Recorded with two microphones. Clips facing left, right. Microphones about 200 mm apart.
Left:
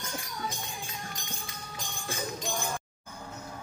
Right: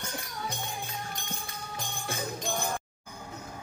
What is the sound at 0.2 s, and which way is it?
Music, 60° right (ahead or behind).